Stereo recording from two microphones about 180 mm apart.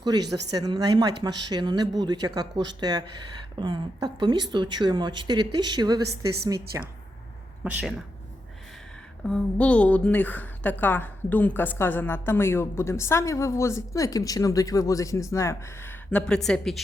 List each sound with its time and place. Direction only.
0.0 s speech: 20° right (ahead or behind)
9.2 s a woman's voice: 5° left (ahead or behind)